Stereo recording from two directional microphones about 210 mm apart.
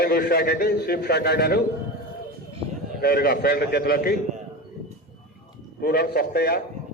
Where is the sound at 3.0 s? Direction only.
45° left (ahead or behind).